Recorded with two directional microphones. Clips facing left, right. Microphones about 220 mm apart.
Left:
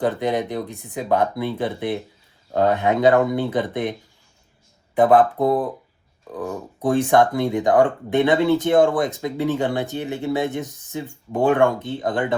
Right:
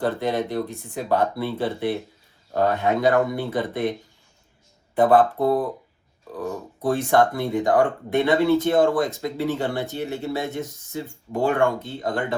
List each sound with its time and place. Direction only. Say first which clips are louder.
0.0 s speech: left 2 dB; 15° left (ahead or behind)
4.9 s speech: left 2 dB; 15° left (ahead or behind)
6.8 s speech: left 3 dB; 15° left (ahead or behind)